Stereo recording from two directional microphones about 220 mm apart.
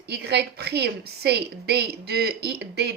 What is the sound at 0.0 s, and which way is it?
A woman's voice, 50° right (ahead or behind).